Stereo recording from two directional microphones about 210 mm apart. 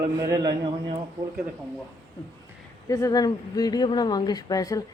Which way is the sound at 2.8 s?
15° left (ahead or behind).